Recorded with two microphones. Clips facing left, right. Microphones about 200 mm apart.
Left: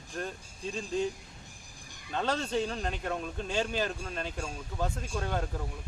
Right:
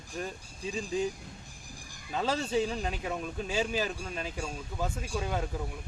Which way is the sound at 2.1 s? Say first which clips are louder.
Right 1 dB; 5° right (ahead or behind).